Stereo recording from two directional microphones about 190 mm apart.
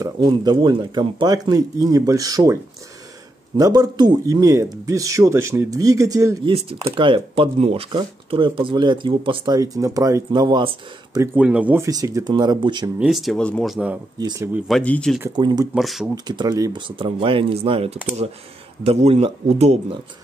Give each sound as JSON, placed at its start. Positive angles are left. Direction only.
{"t": 0.0, "sound": "a man's voice", "side_deg": -20}
{"t": 7.0, "sound": "speech", "side_deg": -30}
{"t": 11.3, "sound": "a man's voice", "side_deg": -5}
{"t": 13.0, "sound": "speech", "side_deg": 0}
{"t": 14.2, "sound": "a man's voice", "side_deg": -15}
{"t": 14.7, "sound": "speech", "side_deg": 5}
{"t": 15.3, "sound": "speech", "side_deg": -20}
{"t": 15.7, "sound": "speech", "side_deg": 0}
{"t": 16.3, "sound": "speech", "side_deg": -20}